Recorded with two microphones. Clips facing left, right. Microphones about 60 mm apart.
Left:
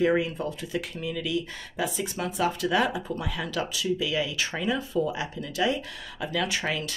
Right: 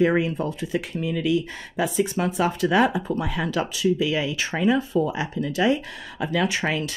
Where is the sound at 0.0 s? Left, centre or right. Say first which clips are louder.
Right 3 dB; right.